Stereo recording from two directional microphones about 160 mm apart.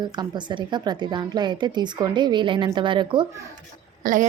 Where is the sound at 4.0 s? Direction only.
55° right (ahead or behind).